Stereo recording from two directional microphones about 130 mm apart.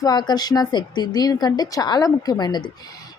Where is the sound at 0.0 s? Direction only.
35° left (ahead or behind).